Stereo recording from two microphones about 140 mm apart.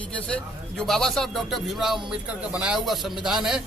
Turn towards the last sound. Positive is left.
turn(degrees=-5)  # may be behind; listen again after turning